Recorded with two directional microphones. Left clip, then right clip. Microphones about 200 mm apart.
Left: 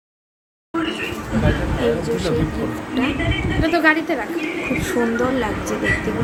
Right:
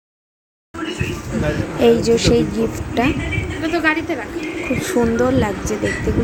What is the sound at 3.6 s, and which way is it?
Speech, 5° left (ahead or behind).